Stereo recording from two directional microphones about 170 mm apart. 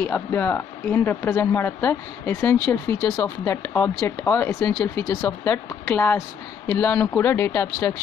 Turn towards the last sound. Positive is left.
turn(degrees=15)  # may be behind; listen again after turning